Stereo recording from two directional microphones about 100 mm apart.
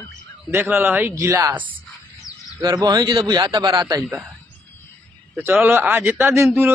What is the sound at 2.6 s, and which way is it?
A man's voice, 40° right (ahead or behind).